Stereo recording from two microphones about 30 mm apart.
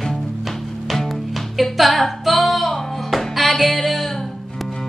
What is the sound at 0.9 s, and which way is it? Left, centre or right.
Music, centre.